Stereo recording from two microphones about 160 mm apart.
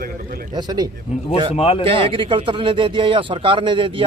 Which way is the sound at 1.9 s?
35° right (ahead or behind).